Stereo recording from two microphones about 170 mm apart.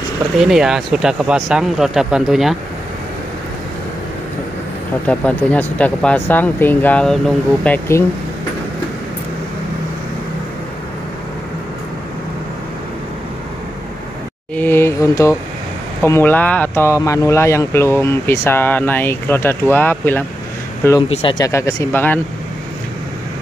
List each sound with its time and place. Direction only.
0.4 s speech: 5° right (ahead or behind)
5.0 s speech: 10° left (ahead or behind)
14.5 s speech: 10° left (ahead or behind)
21.1 s speech: 30° left (ahead or behind)
21.5 s speech: 20° left (ahead or behind)